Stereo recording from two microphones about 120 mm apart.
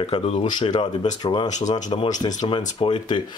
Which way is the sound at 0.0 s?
55° left (ahead or behind).